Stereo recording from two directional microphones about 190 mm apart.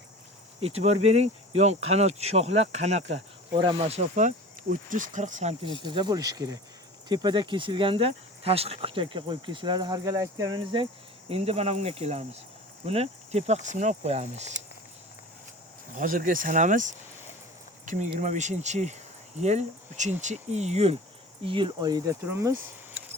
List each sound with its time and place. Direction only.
0.6 s speech: 35° right (ahead or behind)
5.6 s speech: 25° right (ahead or behind)
16.0 s speech: 45° right (ahead or behind); by 22.5 s 15° right (ahead or behind)